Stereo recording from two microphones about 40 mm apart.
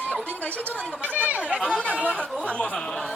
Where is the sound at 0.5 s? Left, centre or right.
Right.